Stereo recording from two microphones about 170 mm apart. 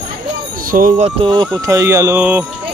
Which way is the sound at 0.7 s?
55° right (ahead or behind).